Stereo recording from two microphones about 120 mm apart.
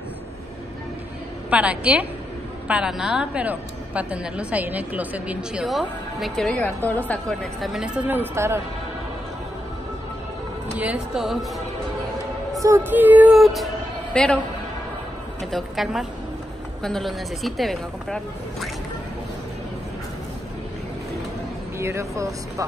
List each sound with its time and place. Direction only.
1.5 s a woman's voice: 10° right (ahead or behind)
6.5 s a woman's voice: 15° left (ahead or behind)
7.6 s a woman's voice: 5° right (ahead or behind)
10.8 s a woman's voice: 10° right (ahead or behind)
12.6 s a woman's voice: 20° right (ahead or behind)
13.3 s a woman's voice: centre (ahead or behind)
15.5 s speech: centre (ahead or behind)
21.7 s speech: 25° right (ahead or behind)